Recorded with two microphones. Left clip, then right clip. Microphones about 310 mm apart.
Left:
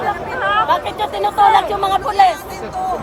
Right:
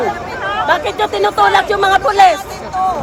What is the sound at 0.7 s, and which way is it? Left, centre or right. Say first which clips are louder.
Speech: right 3 dB; right.